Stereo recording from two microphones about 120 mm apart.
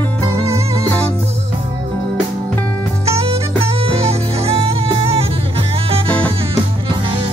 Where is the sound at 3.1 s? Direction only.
55° right (ahead or behind).